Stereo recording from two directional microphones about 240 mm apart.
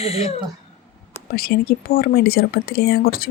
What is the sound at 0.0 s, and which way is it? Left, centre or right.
Speech, left.